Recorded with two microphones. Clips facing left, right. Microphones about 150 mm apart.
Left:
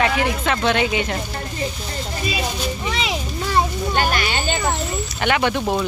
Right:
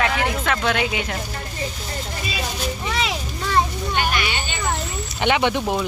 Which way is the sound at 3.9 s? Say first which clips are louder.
Left 2 dB; 40° left (ahead or behind).